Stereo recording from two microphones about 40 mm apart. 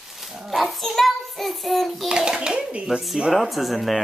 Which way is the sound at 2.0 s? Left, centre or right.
Centre.